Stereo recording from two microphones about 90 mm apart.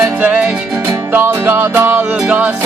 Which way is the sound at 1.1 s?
25° right (ahead or behind).